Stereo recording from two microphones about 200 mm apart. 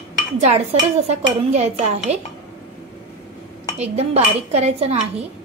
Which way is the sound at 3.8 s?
35° right (ahead or behind).